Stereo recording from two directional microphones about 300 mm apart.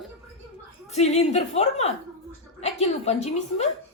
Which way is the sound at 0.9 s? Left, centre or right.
Left.